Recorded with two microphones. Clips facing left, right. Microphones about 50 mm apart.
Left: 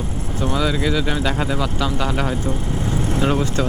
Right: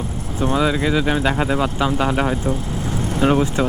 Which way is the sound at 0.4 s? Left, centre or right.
Right.